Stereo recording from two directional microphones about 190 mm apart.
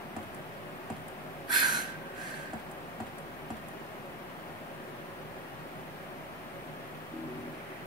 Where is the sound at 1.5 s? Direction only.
20° right (ahead or behind).